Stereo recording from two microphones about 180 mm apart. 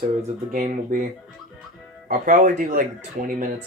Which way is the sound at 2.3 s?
45° right (ahead or behind).